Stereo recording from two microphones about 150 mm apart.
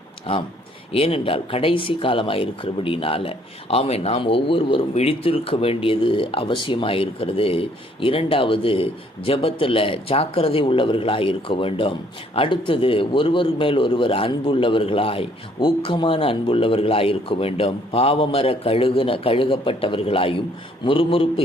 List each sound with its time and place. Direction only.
0.3 s speech: 45° left (ahead or behind)